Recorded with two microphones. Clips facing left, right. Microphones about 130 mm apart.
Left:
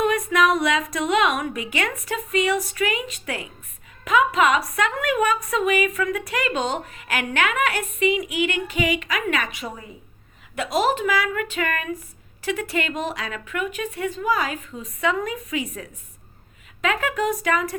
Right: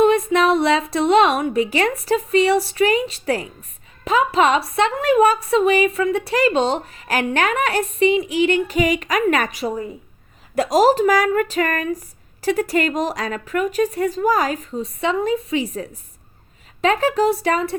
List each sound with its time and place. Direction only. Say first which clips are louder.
0.0 s a woman's voice: right 5 dB; 25° right (ahead or behind)